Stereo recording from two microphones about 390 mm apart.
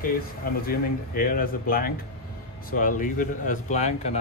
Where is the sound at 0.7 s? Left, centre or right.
Left.